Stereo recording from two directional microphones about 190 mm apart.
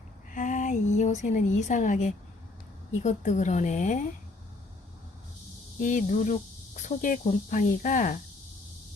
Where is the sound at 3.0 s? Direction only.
40° left (ahead or behind).